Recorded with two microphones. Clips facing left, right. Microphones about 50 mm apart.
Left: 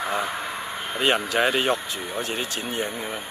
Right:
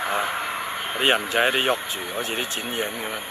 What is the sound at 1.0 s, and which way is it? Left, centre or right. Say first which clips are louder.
Speech: right 1 dB; right.